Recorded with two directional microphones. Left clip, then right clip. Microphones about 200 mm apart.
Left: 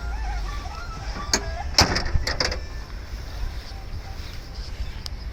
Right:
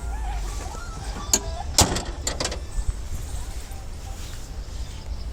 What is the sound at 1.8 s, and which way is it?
Vehicle, 5° right (ahead or behind).